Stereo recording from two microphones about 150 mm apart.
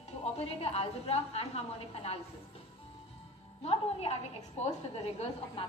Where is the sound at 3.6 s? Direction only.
45° left (ahead or behind).